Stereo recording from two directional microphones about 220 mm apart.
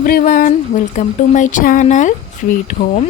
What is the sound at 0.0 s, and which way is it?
Speech, 40° left (ahead or behind).